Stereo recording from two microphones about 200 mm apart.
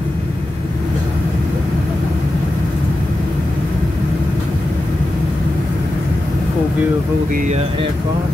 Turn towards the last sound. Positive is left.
turn(degrees=-35)  # may be behind; listen again after turning